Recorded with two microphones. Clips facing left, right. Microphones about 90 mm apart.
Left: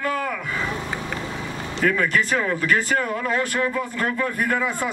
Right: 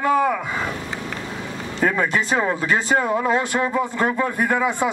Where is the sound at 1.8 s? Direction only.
25° right (ahead or behind).